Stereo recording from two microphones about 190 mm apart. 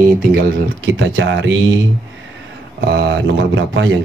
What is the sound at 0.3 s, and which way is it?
Speech, 60° right (ahead or behind).